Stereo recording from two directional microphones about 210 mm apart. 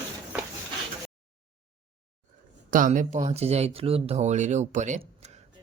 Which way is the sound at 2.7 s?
40° right (ahead or behind).